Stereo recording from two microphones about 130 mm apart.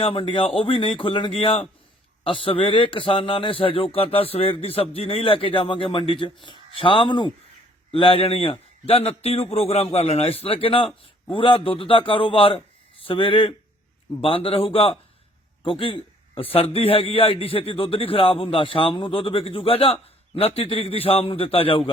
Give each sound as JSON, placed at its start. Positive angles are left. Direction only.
{"t": 0.0, "sound": "a man's voice", "side_deg": 40}